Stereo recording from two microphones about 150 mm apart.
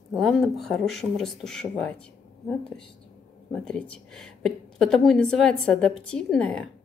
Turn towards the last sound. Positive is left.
turn(degrees=5)  # may be behind; listen again after turning